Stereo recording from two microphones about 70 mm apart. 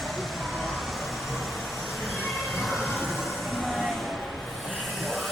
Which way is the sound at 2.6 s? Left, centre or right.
Centre.